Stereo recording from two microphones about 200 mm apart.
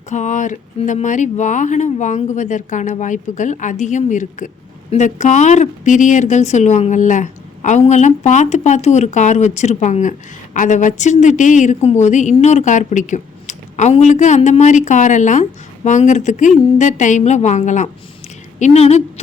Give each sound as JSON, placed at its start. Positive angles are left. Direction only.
{"t": 0.1, "sound": "speech", "side_deg": 35}